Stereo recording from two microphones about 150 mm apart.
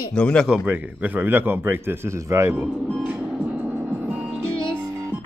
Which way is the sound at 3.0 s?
10° right (ahead or behind).